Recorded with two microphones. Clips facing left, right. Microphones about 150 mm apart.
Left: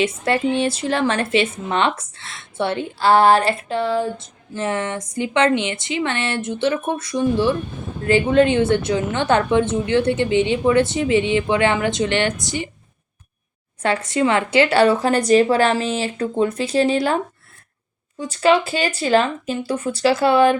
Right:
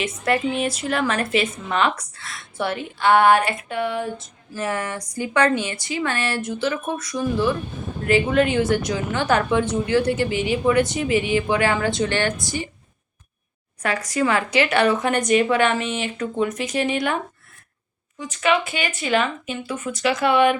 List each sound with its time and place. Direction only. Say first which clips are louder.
0.0 s a woman's voice: left 3 dB; 30° left (ahead or behind)
13.8 s a woman's voice: left 3 dB; 25° left (ahead or behind)
18.2 s a woman's voice: left 5 dB; 30° left (ahead or behind)